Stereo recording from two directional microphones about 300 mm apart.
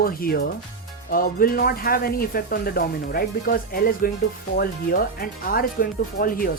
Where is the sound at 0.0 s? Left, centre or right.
Left.